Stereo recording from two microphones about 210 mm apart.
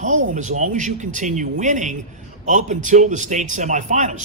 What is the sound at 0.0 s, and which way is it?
A man's voice, 35° right (ahead or behind).